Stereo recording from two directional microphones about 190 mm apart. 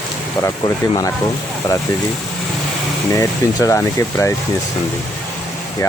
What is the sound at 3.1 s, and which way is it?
Speech, 15° left (ahead or behind).